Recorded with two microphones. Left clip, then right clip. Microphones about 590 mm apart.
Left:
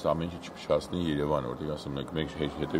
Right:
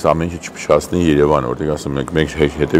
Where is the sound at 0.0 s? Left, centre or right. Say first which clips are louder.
Right 14 dB; right.